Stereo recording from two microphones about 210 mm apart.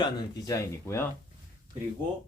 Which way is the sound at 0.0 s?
15° left (ahead or behind).